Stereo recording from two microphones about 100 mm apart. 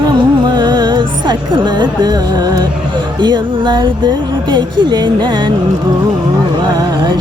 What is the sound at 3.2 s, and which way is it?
Speech, 50° right (ahead or behind).